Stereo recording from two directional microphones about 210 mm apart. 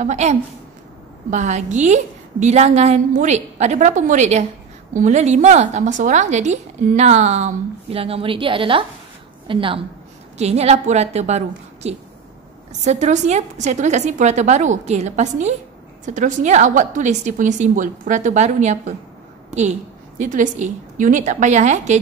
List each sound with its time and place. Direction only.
0.0 s a woman's voice: 35° right (ahead or behind)
20.2 s a woman's voice: 35° right (ahead or behind)